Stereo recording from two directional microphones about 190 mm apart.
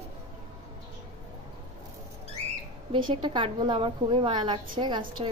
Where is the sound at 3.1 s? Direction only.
25° right (ahead or behind).